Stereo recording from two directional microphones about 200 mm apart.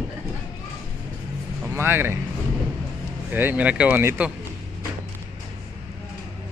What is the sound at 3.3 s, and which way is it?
Speech, 10° right (ahead or behind).